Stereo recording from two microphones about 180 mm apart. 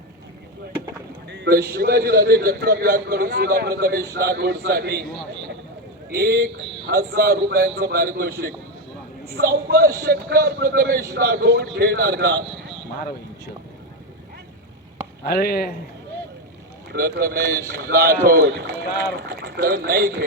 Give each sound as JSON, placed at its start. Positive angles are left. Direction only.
{"t": 1.3, "sound": "a man's voice", "side_deg": -65}
{"t": 6.1, "sound": "a man's voice", "side_deg": -60}
{"t": 15.2, "sound": "speech", "side_deg": 60}
{"t": 16.9, "sound": "a man's voice", "side_deg": -55}